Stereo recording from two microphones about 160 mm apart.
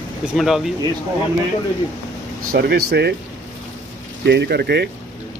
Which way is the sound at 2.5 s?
85° right.